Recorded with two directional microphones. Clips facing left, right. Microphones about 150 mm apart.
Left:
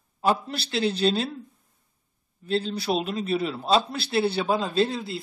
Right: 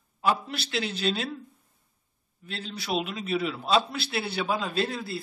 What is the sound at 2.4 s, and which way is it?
A man's voice, 35° left (ahead or behind).